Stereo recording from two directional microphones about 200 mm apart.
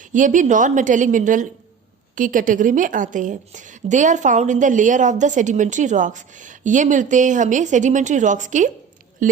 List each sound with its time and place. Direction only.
0.1 s a woman's voice: 40° right (ahead or behind)